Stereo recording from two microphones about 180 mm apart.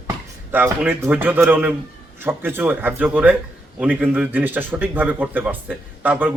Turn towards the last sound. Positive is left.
turn(degrees=-10)  # may be behind; listen again after turning